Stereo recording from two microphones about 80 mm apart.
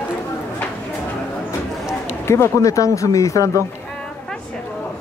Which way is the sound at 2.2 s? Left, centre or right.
Left.